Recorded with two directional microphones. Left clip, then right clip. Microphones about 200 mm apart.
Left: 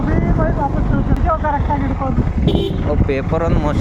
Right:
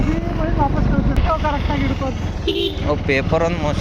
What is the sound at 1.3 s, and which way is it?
Speech, 15° left (ahead or behind).